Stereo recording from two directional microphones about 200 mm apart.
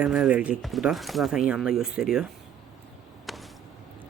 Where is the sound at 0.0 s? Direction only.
5° right (ahead or behind).